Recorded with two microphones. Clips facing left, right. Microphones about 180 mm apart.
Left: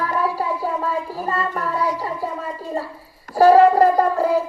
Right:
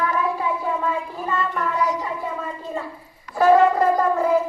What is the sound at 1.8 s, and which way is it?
Speech, 20° right (ahead or behind).